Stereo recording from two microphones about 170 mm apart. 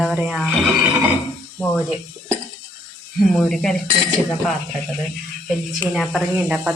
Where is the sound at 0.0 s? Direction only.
5° right (ahead or behind).